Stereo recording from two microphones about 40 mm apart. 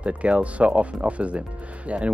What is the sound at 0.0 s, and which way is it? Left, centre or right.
Speech, right.